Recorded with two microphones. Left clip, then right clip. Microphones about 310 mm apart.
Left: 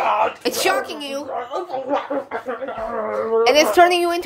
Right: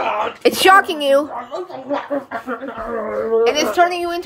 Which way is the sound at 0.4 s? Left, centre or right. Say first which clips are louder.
Right 9 dB; centre.